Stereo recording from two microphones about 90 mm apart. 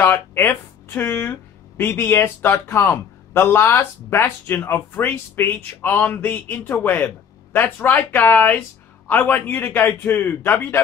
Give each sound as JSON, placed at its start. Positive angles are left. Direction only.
{"t": 0.0, "sound": "speech", "side_deg": 25}